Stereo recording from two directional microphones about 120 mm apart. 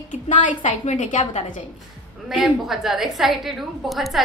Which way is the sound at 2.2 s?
5° right (ahead or behind).